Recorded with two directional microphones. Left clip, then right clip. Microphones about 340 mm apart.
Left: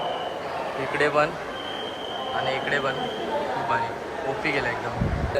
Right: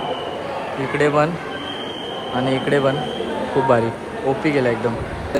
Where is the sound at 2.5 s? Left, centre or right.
Centre.